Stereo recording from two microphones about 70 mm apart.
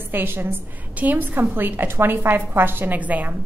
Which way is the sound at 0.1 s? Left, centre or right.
Right.